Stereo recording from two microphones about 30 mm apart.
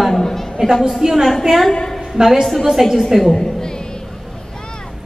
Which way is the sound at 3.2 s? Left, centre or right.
Centre.